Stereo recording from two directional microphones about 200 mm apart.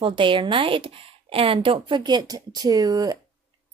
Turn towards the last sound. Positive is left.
turn(degrees=-20)  # may be behind; listen again after turning